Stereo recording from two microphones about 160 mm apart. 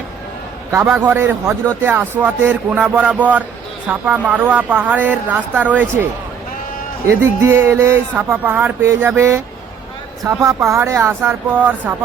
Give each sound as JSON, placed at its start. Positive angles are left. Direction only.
{"t": 0.7, "sound": "speech", "side_deg": -15}
{"t": 7.1, "sound": "speech", "side_deg": -15}